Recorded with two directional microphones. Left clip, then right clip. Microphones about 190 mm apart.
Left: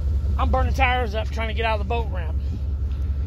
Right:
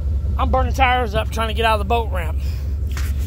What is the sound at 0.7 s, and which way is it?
Speech, 30° right (ahead or behind).